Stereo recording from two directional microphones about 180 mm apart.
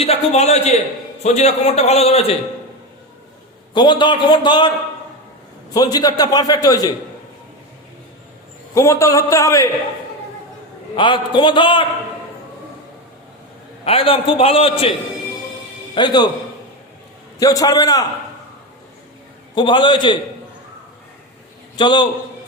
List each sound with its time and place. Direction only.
0.0 s a man's voice: 35° left (ahead or behind)
3.8 s a man's voice: 25° left (ahead or behind)
5.7 s a man's voice: 20° left (ahead or behind)
8.7 s a man's voice: 15° left (ahead or behind)
10.9 s a man's voice: 25° left (ahead or behind)
13.8 s a man's voice: 30° left (ahead or behind)
16.0 s a man's voice: 25° left (ahead or behind)
17.4 s a man's voice: 20° left (ahead or behind)
19.5 s a man's voice: 25° left (ahead or behind)
21.8 s a man's voice: 25° left (ahead or behind)